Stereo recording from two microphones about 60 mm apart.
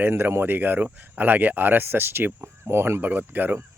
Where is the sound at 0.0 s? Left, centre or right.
Right.